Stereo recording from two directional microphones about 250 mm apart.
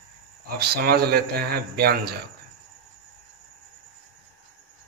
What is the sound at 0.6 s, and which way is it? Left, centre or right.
Speech, right.